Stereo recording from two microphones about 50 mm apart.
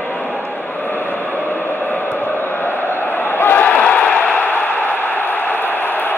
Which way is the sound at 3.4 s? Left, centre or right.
Left.